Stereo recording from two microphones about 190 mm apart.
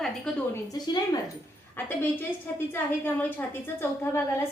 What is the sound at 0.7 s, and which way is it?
A woman's voice, 20° left (ahead or behind).